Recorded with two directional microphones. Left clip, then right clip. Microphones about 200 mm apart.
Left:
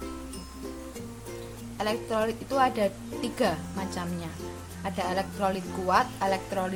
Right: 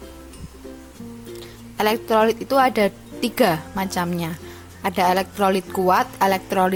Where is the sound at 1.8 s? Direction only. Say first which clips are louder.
Right 10 dB; 40° right (ahead or behind).